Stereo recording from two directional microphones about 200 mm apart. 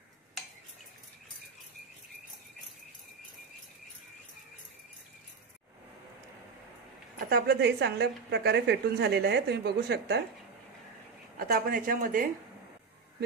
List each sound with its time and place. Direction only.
7.2 s a woman's voice: 55° right (ahead or behind)
11.3 s speech: 45° right (ahead or behind)